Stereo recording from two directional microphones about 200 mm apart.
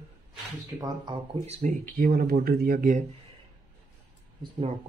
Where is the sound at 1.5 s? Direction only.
40° right (ahead or behind).